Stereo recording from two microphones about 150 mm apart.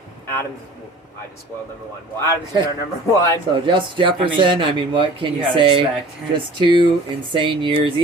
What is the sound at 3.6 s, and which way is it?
Speech, 35° right (ahead or behind).